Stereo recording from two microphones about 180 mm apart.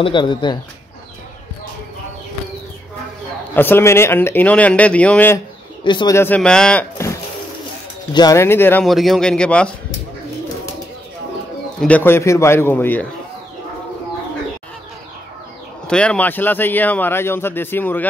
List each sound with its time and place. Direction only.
0.0 s speech: 25° left (ahead or behind)
3.5 s speech: 10° left (ahead or behind)
5.9 s speech: 25° left (ahead or behind)
6.1 s speech: 10° left (ahead or behind)
8.1 s speech: 20° left (ahead or behind)
8.8 s speech: centre (ahead or behind)
11.8 s speech: 10° left (ahead or behind)
15.9 s speech: 5° left (ahead or behind)